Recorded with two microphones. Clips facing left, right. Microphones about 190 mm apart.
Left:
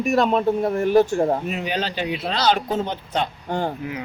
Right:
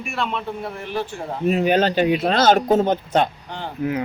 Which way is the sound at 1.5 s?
45° right (ahead or behind).